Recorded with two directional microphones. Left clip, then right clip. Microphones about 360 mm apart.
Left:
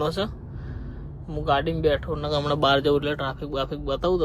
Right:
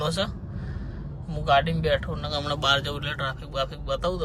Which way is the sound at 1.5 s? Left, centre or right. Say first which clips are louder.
Even; centre.